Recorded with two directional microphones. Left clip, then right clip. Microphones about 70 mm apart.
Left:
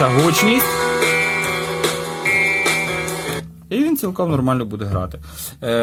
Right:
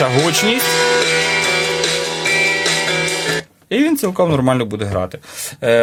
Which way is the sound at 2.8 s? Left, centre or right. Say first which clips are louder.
Right 5 dB; right.